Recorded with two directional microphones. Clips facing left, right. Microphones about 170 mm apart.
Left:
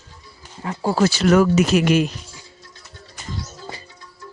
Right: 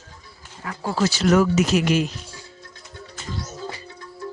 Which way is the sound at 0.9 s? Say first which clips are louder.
Left 2 dB; 55° left (ahead or behind).